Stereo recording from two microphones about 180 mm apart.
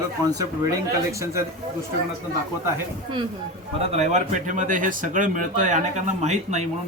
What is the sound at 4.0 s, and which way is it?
Speech, 40° right (ahead or behind).